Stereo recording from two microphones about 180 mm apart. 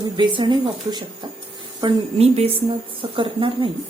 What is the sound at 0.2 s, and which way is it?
A woman's voice, 25° right (ahead or behind).